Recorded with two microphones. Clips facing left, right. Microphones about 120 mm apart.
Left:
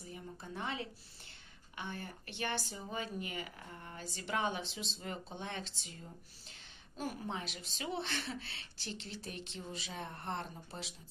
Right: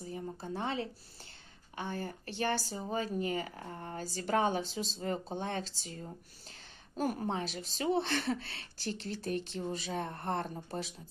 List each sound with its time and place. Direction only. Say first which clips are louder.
0.0 s speech: right 7 dB; 35° right (ahead or behind)